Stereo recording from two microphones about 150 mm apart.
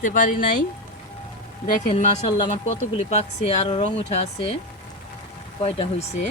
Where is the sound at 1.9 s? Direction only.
50° left (ahead or behind).